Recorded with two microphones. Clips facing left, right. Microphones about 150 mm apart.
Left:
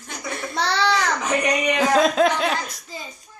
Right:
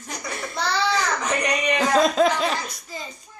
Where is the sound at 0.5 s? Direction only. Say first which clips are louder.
Left 2 dB; 75° left (ahead or behind).